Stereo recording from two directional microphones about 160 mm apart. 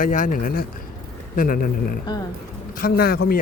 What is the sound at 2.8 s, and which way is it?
Speech, 75° left (ahead or behind).